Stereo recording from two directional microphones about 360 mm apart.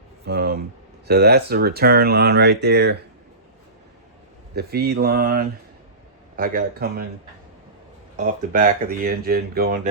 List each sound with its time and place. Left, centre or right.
0.3 s speech: right
4.5 s speech: right
8.1 s speech: right